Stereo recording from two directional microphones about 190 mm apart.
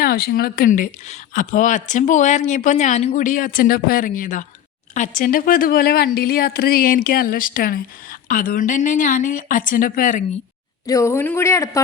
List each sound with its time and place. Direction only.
0.0 s a woman's voice: 55° left (ahead or behind)
10.8 s speech: 15° left (ahead or behind)